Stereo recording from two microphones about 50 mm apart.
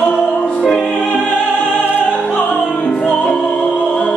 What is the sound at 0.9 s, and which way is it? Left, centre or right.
Music, left.